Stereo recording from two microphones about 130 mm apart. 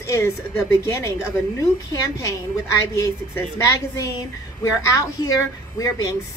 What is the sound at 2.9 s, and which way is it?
Speech, 25° left (ahead or behind).